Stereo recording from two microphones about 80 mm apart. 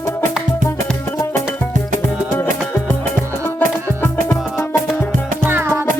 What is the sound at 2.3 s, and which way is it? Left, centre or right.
Music, left.